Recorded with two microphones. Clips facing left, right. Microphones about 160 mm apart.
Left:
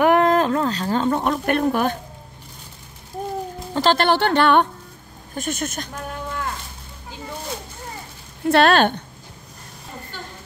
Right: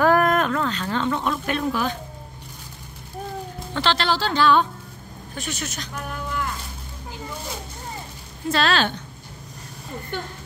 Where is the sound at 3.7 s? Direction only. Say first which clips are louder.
Left 5 dB; 45° left (ahead or behind); by 4.6 s 60° left (ahead or behind).